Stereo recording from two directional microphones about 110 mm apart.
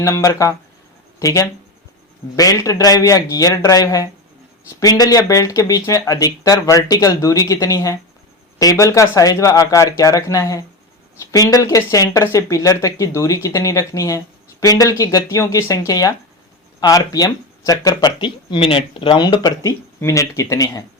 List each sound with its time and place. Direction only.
0.0 s speech: 25° left (ahead or behind)
18.2 s speech: 50° left (ahead or behind); by 20.8 s 30° left (ahead or behind)